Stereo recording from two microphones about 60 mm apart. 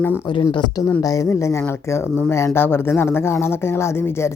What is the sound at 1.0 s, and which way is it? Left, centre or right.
Speech, left.